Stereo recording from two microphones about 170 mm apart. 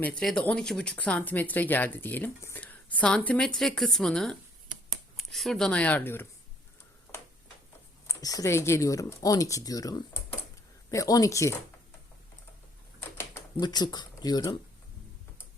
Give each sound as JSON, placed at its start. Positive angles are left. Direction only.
{"t": 0.0, "sound": "speech", "side_deg": 5}
{"t": 8.0, "sound": "speech", "side_deg": 20}
{"t": 13.0, "sound": "a sound", "side_deg": 15}